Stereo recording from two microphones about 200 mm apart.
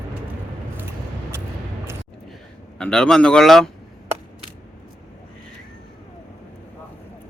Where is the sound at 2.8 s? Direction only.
5° left (ahead or behind).